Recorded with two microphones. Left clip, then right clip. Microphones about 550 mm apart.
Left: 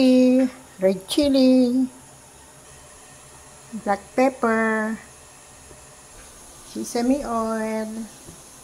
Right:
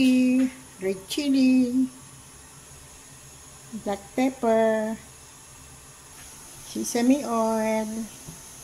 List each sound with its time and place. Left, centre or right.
0.0 s speech: right
3.8 s speech: right
6.8 s speech: right